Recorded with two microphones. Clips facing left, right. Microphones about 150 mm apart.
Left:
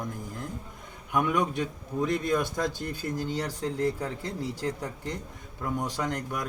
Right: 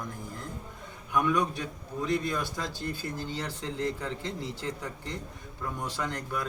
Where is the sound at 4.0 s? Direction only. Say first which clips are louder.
Left 2 dB; 10° left (ahead or behind).